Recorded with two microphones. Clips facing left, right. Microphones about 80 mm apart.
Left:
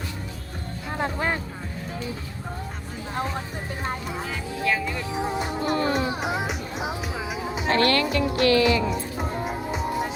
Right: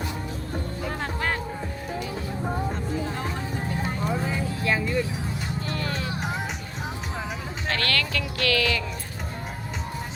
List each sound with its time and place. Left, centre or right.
0.9 s music: centre
4.3 s music: right
5.6 s music: left
7.7 s speech: left